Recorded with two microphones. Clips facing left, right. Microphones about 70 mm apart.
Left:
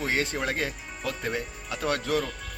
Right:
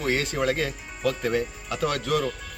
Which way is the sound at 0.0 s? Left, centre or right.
Left.